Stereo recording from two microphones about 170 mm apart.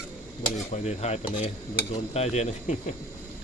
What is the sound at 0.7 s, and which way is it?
Speech, 40° left (ahead or behind).